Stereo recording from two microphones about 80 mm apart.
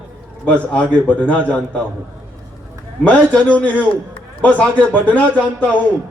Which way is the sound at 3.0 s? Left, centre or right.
Centre.